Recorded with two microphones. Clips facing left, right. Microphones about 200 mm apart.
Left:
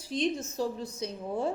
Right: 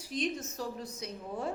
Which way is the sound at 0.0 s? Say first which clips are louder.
Left 4 dB; 30° left (ahead or behind).